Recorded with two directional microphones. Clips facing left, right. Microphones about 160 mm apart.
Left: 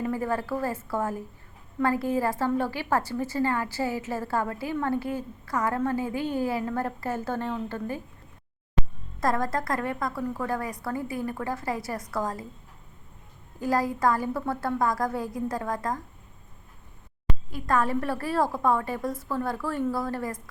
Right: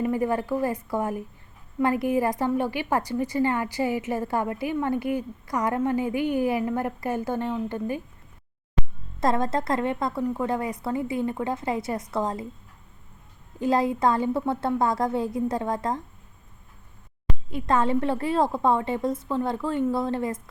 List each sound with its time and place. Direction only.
0.0 s a woman's voice: 15° right (ahead or behind)
9.2 s a woman's voice: 25° right (ahead or behind)
13.6 s a woman's voice: 25° right (ahead or behind)
17.5 s a woman's voice: 25° right (ahead or behind)